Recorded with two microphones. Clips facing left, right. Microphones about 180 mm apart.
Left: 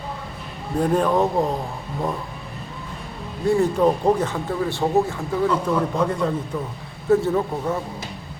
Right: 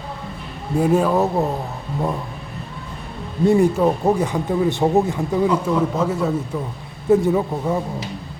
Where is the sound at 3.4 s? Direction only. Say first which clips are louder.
Right 4 dB; 20° right (ahead or behind).